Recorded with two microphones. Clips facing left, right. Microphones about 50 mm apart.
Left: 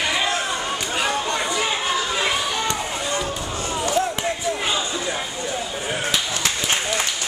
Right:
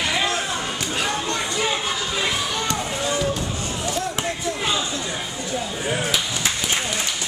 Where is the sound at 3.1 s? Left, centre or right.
Centre.